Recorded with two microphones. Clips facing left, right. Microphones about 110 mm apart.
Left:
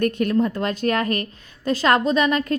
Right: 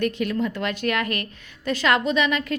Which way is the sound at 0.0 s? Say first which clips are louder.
Left 4 dB; 45° left (ahead or behind).